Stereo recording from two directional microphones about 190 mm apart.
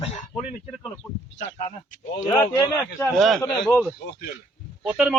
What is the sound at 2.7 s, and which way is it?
Speech, 5° left (ahead or behind).